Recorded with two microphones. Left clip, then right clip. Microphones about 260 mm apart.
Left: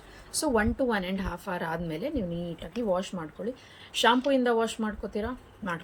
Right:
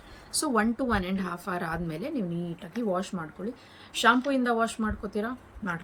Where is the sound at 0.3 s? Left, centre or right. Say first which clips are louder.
Left 1 dB; centre.